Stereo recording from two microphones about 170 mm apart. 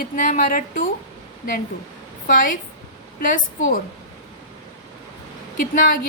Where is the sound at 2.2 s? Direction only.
55° left (ahead or behind).